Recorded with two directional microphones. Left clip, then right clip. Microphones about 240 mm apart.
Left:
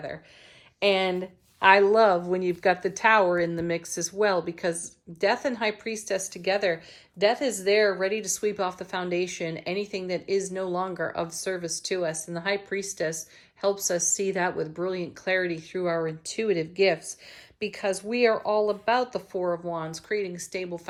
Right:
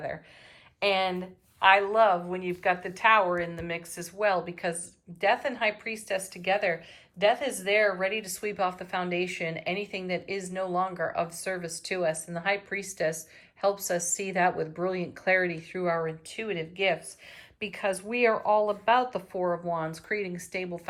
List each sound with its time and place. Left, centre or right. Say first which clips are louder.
0.8 s speech: left 3 dB; centre